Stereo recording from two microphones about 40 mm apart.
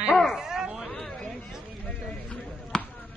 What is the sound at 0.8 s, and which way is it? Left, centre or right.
Chatter, centre.